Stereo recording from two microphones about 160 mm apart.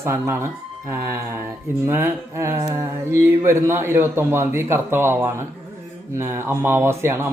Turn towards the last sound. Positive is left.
turn(degrees=-15)  # may be behind; listen again after turning